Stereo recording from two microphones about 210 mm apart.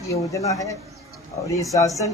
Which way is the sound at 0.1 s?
15° left (ahead or behind).